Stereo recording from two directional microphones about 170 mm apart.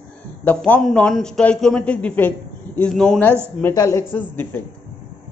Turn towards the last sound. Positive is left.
turn(degrees=10)  # may be behind; listen again after turning